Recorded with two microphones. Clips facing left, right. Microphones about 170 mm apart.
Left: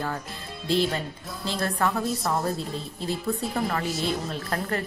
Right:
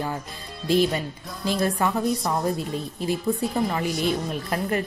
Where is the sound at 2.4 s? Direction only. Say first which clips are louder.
Right 3 dB; 15° right (ahead or behind).